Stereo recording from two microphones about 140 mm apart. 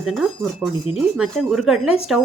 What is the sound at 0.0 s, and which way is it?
Speech, centre (ahead or behind).